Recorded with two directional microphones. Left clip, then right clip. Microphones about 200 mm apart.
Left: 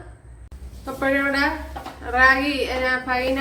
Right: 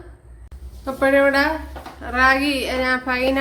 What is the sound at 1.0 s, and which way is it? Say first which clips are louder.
A woman's voice: right 5 dB; 55° right (ahead or behind).